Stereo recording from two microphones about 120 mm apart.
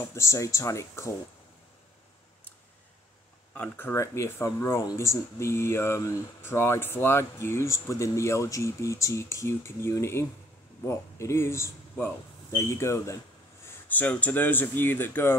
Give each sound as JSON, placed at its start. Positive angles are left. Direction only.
{"t": 0.0, "sound": "speech", "side_deg": 25}
{"t": 3.5, "sound": "speech", "side_deg": 15}